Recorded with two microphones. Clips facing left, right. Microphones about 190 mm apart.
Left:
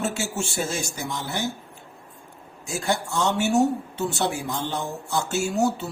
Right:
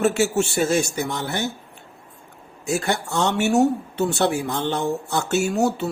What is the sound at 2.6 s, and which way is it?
Speech, 65° right (ahead or behind).